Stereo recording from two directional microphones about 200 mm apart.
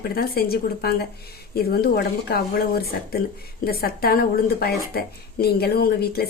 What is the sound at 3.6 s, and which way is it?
Speech, 50° left (ahead or behind).